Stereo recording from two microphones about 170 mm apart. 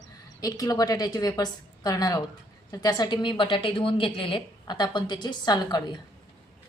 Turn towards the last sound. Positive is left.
turn(degrees=25)  # may be behind; listen again after turning